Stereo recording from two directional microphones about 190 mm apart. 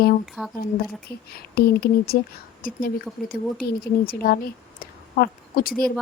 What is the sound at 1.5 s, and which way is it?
Speech, 55° left (ahead or behind).